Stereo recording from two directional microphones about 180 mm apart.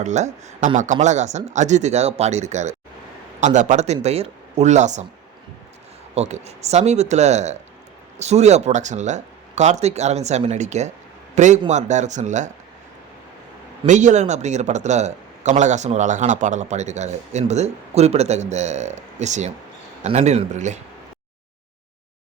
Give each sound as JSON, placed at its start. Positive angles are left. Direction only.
{"t": 0.0, "sound": "speech", "side_deg": -40}
{"t": 6.1, "sound": "speech", "side_deg": -40}
{"t": 13.8, "sound": "speech", "side_deg": -40}